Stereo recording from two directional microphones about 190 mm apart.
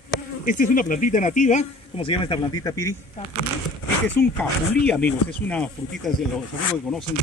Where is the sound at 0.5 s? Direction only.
45° left (ahead or behind); by 2.4 s 25° left (ahead or behind).